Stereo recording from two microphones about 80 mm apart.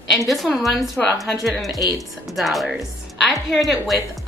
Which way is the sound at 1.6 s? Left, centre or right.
Left.